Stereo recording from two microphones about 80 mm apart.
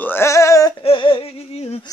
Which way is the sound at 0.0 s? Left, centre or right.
Left.